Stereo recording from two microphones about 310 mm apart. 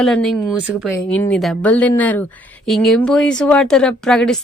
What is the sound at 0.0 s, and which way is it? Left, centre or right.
A woman's voice, centre.